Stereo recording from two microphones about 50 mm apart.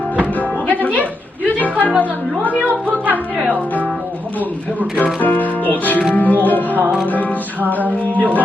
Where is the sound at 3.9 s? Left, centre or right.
Right.